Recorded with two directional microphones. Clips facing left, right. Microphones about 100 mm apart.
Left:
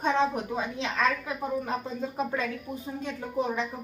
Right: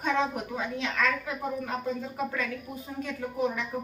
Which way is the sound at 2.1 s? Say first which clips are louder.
Left 2 dB; 25° left (ahead or behind).